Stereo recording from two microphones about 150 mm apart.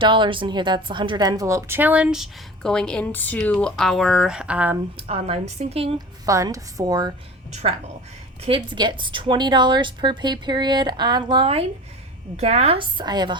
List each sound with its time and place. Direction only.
0.0 s speech: 35° right (ahead or behind); by 4.8 s 10° right (ahead or behind)
4.9 s a woman's voice: 40° right (ahead or behind)
6.2 s a woman's voice: 20° right (ahead or behind)
7.5 s a woman's voice: 40° right (ahead or behind)